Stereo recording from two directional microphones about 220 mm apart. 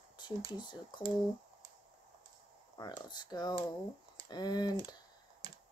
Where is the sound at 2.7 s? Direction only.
15° left (ahead or behind).